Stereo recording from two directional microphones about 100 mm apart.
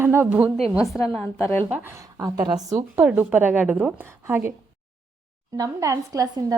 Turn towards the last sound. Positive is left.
turn(degrees=-35)  # may be behind; listen again after turning